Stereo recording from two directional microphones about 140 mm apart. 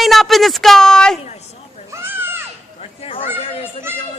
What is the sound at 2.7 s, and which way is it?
Children playing, 45° left (ahead or behind).